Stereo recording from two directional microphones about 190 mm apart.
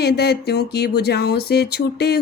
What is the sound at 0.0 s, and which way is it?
Speech, 60° left (ahead or behind).